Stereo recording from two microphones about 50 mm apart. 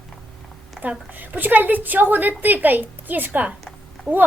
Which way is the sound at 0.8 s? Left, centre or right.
Centre.